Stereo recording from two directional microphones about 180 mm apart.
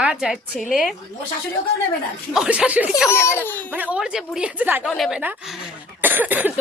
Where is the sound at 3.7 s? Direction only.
5° right (ahead or behind).